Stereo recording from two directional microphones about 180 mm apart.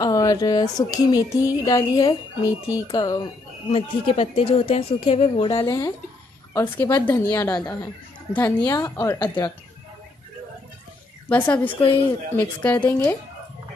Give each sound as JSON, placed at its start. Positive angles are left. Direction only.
{"t": 0.0, "sound": "speech", "side_deg": 20}
{"t": 3.7, "sound": "speech", "side_deg": 35}
{"t": 5.7, "sound": "speech", "side_deg": 15}
{"t": 11.2, "sound": "speech", "side_deg": 10}